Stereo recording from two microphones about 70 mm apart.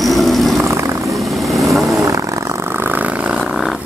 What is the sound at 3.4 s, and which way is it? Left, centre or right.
Wild animals, centre.